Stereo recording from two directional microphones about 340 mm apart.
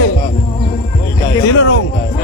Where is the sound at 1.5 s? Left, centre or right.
Left.